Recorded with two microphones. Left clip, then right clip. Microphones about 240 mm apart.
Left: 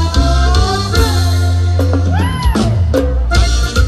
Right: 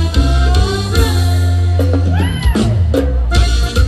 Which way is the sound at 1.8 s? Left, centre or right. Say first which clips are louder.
Left 1 dB; centre.